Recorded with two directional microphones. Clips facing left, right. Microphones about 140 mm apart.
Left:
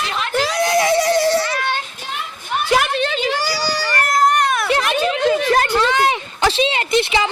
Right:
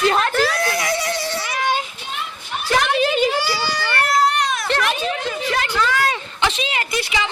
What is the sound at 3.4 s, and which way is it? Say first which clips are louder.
Baby cry: left 1 dB; 40° left (ahead or behind).